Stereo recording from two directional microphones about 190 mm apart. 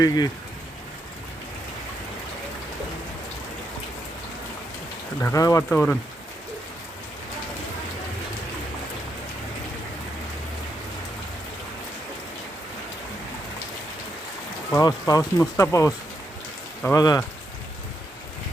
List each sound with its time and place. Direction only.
0.0 s speech: 20° left (ahead or behind)
5.2 s speech: 15° left (ahead or behind)
14.7 s speech: 20° left (ahead or behind)